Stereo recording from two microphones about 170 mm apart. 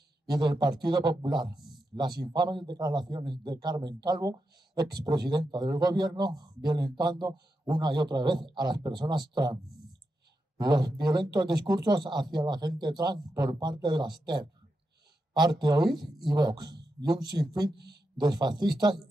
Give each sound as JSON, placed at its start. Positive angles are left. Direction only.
{"t": 0.3, "sound": "a man's voice", "side_deg": -25}
{"t": 1.5, "sound": "a sound", "side_deg": 0}
{"t": 2.0, "sound": "a man's voice", "side_deg": -25}
{"t": 10.6, "sound": "a man's voice", "side_deg": -25}
{"t": 15.9, "sound": "speech", "side_deg": 0}
{"t": 16.3, "sound": "a man's voice", "side_deg": -25}
{"t": 17.7, "sound": "a man's voice", "side_deg": -75}
{"t": 18.2, "sound": "a man's voice", "side_deg": -25}